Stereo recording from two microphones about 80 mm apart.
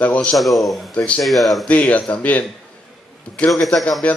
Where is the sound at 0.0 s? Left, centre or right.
Centre.